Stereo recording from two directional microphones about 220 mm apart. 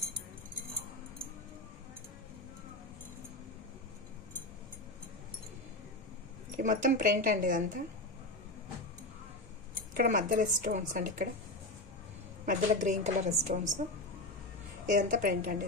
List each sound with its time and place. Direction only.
6.5 s speech: 35° right (ahead or behind)
9.9 s speech: 40° right (ahead or behind)
12.4 s speech: 35° right (ahead or behind)
14.9 s speech: 35° right (ahead or behind)